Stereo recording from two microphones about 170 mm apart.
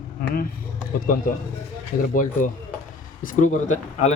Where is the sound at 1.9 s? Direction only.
60° left (ahead or behind).